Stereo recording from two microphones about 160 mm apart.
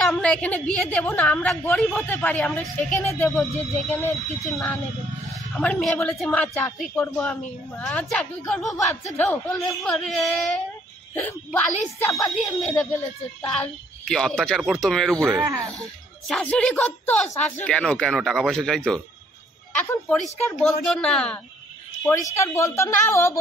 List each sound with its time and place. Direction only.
0.0 s a woman's voice: 5° left (ahead or behind)
4.5 s a woman's voice: centre (ahead or behind); by 12.4 s 20° left (ahead or behind)
12.4 s a woman's voice: centre (ahead or behind)
12.7 s a woman's voice: 10° left (ahead or behind)
15.3 s speech: 20° right (ahead or behind)
16.3 s a woman's voice: 5° left (ahead or behind)
22.0 s a woman's voice: 15° left (ahead or behind)